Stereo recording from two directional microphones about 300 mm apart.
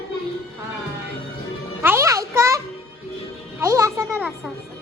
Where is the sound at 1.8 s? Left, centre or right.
Centre.